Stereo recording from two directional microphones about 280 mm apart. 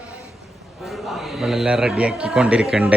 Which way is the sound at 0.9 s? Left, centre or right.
Centre.